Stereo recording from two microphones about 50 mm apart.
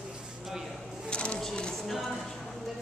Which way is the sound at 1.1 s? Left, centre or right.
Left.